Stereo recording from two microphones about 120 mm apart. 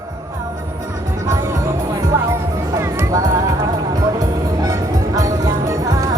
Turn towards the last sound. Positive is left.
turn(degrees=-30)  # may be behind; listen again after turning